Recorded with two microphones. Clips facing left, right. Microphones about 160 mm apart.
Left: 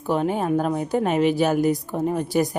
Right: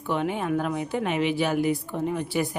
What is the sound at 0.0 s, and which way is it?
A woman's voice, 40° left (ahead or behind).